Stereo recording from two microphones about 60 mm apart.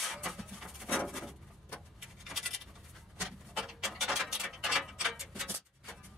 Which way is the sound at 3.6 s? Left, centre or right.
Centre.